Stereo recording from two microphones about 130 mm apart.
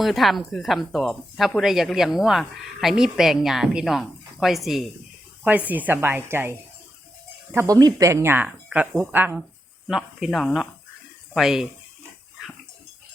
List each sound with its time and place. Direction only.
0.0 s speech: centre (ahead or behind)
5.4 s a woman's voice: 10° right (ahead or behind)
9.8 s speech: centre (ahead or behind)